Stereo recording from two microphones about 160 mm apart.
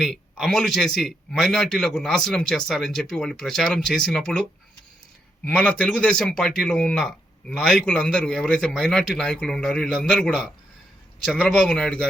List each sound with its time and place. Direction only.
0.0 s speech: centre (ahead or behind)
5.5 s speech: 5° left (ahead or behind)